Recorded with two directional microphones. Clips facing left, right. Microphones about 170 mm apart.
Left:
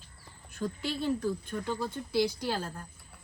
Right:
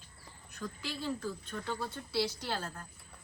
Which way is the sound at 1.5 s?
15° left (ahead or behind).